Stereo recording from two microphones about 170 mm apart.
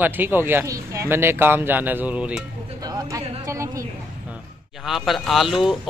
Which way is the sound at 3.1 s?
15° right (ahead or behind).